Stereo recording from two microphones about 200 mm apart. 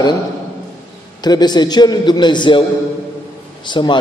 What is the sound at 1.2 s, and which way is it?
A man's voice, 20° left (ahead or behind).